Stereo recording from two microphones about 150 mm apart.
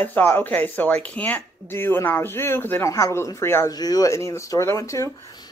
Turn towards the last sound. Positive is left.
turn(degrees=25)  # may be behind; listen again after turning